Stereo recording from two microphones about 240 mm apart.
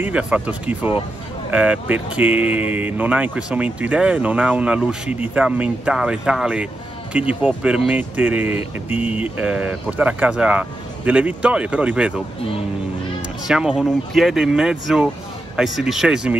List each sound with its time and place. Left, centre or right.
0.0 s speech: centre
13.5 s speech: centre